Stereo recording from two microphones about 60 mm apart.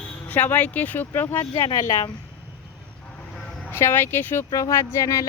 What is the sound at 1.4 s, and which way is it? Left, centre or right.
Speech, left.